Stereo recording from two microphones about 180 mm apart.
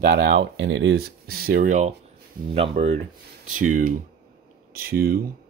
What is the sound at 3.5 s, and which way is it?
Speech, 45° right (ahead or behind).